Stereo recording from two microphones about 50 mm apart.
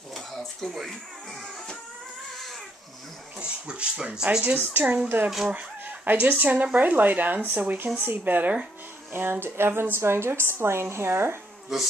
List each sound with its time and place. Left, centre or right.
0.1 s a sound: centre
3.3 s speech: right
4.6 s speech: right
9.1 s a woman's voice: right